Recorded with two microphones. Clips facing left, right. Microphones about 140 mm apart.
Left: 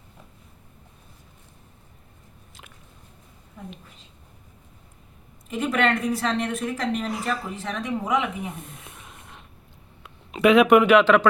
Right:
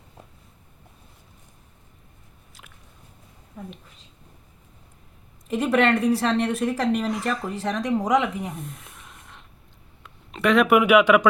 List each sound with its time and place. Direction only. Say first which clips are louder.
5.5 s a woman's voice: right 3 dB; 35° right (ahead or behind)
7.1 s speech: right 2 dB; 5° left (ahead or behind)
7.5 s a woman's voice: right 4 dB; 35° right (ahead or behind)
8.5 s a sound: right 3 dB; centre (ahead or behind)
10.8 s speech: even; 10° right (ahead or behind)